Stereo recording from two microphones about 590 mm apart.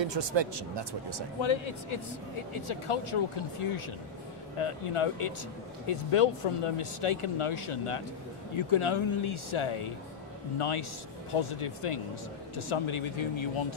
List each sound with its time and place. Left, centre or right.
0.0 s speech: right
1.4 s speech: left